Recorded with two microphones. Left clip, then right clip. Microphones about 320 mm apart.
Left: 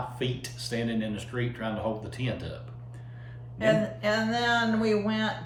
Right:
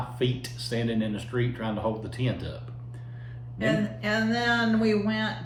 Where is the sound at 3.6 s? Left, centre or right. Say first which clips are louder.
Left 3 dB; centre.